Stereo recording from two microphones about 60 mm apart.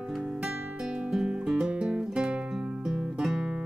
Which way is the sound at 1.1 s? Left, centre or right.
Centre.